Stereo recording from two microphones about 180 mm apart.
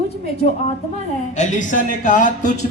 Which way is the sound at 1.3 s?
40° left (ahead or behind).